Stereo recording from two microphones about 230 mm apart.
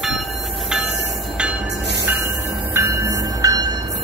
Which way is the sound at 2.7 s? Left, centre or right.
Centre.